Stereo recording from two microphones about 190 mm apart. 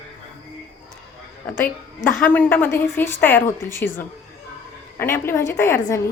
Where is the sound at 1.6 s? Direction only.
10° left (ahead or behind).